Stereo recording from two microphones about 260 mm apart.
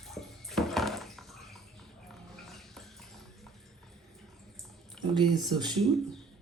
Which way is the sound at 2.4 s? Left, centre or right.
Centre.